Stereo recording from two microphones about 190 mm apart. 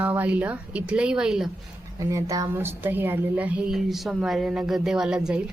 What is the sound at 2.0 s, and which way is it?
A woman's voice, 15° right (ahead or behind).